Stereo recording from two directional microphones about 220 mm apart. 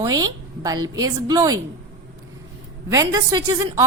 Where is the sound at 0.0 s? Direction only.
15° right (ahead or behind).